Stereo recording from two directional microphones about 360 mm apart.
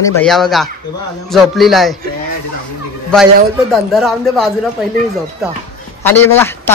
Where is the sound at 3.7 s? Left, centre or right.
Centre.